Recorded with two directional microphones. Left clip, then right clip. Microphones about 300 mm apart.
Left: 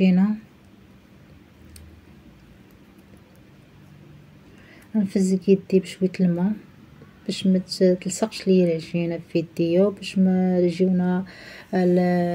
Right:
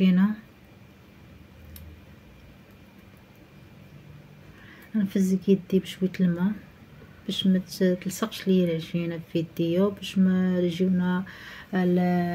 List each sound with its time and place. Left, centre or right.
0.0 s speech: centre
4.9 s speech: centre